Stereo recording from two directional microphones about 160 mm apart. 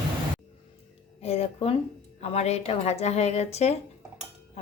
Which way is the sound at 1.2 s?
40° left (ahead or behind).